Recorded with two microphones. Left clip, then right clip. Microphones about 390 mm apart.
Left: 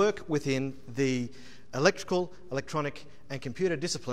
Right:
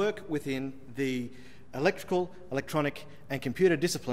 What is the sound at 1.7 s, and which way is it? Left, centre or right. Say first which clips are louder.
A man's voice: left 2 dB; left.